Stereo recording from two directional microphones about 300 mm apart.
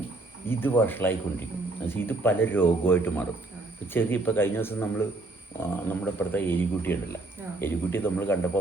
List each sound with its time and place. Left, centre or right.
0.4 s speech: centre